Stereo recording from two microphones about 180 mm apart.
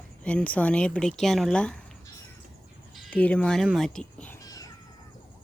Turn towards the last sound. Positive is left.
turn(degrees=20)  # may be behind; listen again after turning